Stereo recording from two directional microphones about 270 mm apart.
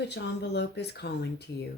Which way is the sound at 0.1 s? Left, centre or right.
Left.